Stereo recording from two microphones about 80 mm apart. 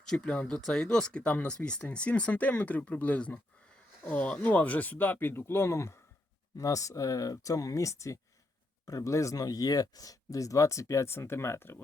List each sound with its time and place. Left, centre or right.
0.0 s speech: centre; by 11.8 s left